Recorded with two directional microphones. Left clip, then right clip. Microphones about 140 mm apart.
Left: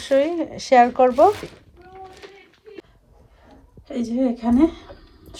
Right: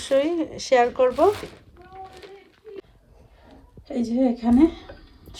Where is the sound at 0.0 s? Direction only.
20° right (ahead or behind).